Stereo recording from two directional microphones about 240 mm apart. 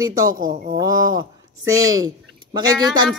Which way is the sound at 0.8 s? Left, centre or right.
Centre.